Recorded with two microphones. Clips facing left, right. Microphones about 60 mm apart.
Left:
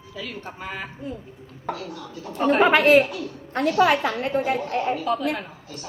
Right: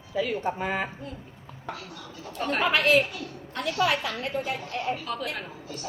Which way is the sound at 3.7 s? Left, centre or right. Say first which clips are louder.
Left 7 dB; left.